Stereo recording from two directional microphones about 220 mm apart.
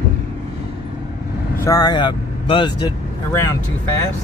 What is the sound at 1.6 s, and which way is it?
Speech, 15° left (ahead or behind).